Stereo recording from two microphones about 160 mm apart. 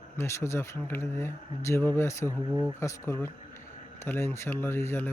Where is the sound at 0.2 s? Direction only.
15° left (ahead or behind).